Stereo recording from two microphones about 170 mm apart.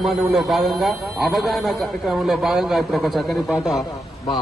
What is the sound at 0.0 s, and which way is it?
A man's voice, centre (ahead or behind).